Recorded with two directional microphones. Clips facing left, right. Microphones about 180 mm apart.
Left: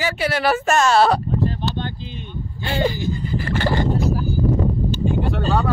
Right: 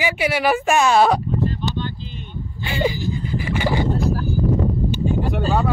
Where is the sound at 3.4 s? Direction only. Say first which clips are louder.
Even; 10° right (ahead or behind).